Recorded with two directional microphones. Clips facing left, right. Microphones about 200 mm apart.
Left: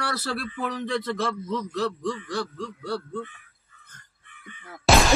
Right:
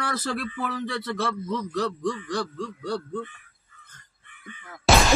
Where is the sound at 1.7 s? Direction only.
15° right (ahead or behind).